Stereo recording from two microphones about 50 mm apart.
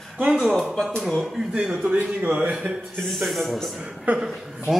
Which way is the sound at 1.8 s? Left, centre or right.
Right.